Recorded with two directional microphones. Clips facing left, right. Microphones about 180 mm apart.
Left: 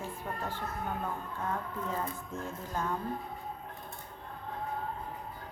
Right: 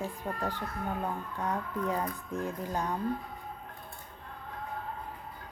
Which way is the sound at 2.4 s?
15° right (ahead or behind).